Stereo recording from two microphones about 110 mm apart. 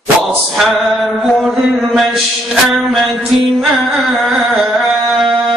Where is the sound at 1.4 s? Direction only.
Centre (ahead or behind).